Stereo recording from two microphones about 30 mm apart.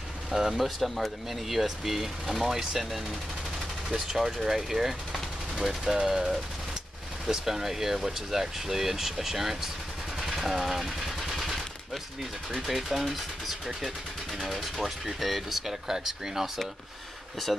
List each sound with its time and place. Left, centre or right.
0.5 s speech: centre
3.9 s speech: centre
10.2 s machine gun: centre
12.5 s speech: centre
15.6 s speech: centre
17.5 s speech: centre